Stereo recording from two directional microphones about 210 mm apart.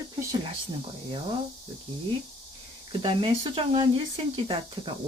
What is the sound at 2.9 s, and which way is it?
Speech, 25° right (ahead or behind).